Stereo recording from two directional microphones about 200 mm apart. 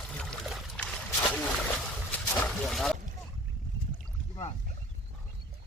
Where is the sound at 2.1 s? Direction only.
5° left (ahead or behind).